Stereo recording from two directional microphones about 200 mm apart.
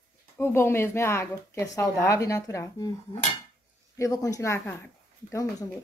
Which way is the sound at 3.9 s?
15° left (ahead or behind).